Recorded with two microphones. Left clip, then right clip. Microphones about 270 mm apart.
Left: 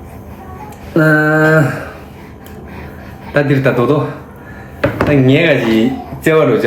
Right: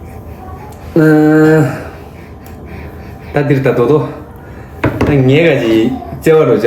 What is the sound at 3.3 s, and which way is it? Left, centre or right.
Speech, centre.